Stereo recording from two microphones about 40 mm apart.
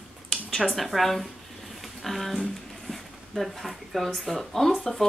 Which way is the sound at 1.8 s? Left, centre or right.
Centre.